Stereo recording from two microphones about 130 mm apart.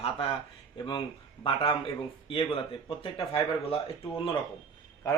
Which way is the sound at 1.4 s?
45° left (ahead or behind).